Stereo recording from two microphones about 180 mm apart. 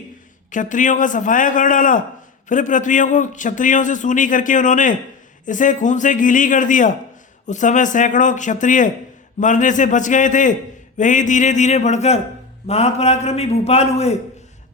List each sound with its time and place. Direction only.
0.5 s a man's voice: 45° left (ahead or behind)